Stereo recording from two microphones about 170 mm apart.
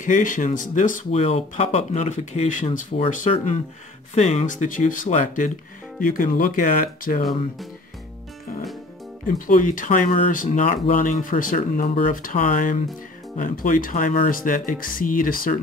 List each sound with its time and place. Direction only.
0.0 s speech: 50° left (ahead or behind)
1.1 s speech: 40° left (ahead or behind); by 7.2 s 55° left (ahead or behind)
9.5 s speech: 50° left (ahead or behind)